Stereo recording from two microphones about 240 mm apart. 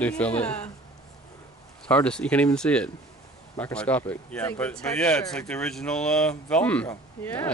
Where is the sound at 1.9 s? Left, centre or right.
Centre.